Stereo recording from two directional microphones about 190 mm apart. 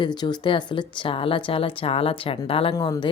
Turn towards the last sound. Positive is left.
turn(degrees=20)  # may be behind; listen again after turning